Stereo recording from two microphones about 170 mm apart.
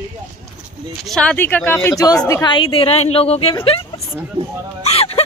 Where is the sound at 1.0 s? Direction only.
5° left (ahead or behind).